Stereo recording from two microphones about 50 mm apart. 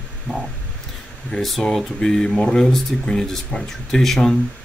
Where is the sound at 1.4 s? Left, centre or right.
Centre.